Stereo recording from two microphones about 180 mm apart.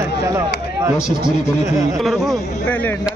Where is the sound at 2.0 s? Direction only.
Centre (ahead or behind).